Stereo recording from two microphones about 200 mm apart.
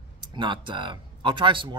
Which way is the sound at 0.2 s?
25° right (ahead or behind).